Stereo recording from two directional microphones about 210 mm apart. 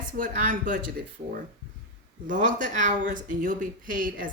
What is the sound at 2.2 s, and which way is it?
Speech, 40° right (ahead or behind).